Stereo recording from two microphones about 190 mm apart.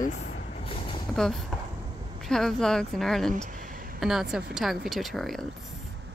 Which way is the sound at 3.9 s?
Centre (ahead or behind).